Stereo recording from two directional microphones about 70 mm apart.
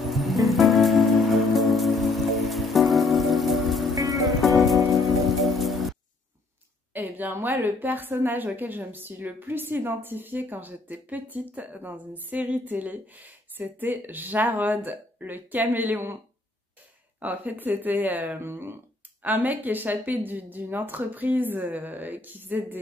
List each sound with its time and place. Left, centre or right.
0.0 s rain on surface: centre
3.9 s music: right
4.4 s music: centre
5.4 s rain on surface: centre
6.9 s a woman's voice: right
17.2 s a woman's voice: right
19.2 s a woman's voice: right